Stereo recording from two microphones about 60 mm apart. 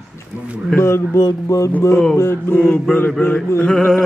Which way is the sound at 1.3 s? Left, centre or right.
Left.